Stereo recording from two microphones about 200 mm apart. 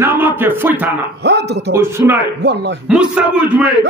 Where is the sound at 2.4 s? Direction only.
60° right (ahead or behind).